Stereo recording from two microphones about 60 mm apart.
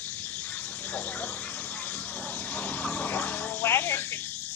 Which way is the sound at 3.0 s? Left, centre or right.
Left.